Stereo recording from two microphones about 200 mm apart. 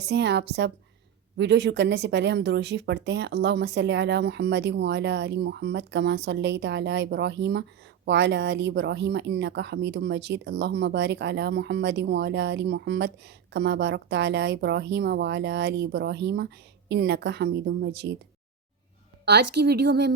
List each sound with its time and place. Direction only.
0.1 s speech: 60° right (ahead or behind)
19.2 s speech: 55° right (ahead or behind)